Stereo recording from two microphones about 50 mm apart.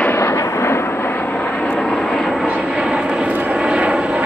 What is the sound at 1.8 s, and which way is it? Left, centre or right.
Vehicle, centre.